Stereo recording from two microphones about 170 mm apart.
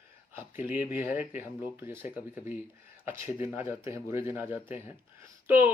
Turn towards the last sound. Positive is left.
turn(degrees=-10)  # may be behind; listen again after turning